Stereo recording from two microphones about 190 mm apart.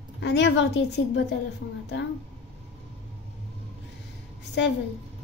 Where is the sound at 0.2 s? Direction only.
65° left (ahead or behind).